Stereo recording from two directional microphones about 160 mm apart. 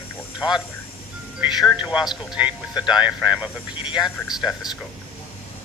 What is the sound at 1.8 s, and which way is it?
Speech, 5° right (ahead or behind).